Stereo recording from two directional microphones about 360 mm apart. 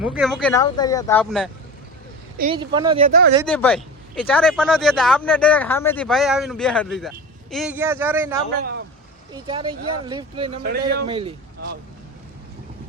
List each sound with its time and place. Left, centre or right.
0.0 s speech: centre
2.4 s speech: centre
3.4 s speech: centre
8.5 s speech: right
9.3 s speech: centre
10.6 s speech: right
11.1 s speech: centre